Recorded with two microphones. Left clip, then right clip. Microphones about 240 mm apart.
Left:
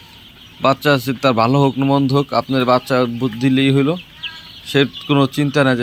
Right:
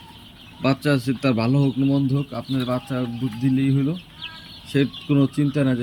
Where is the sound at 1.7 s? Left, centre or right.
Left.